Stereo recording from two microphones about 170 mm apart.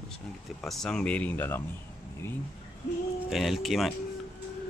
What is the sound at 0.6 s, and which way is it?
Speech, centre (ahead or behind).